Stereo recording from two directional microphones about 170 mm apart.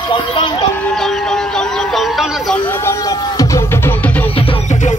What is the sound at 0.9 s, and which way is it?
Music, centre (ahead or behind).